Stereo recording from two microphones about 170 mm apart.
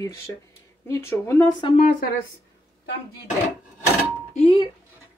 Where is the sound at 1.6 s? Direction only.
30° left (ahead or behind).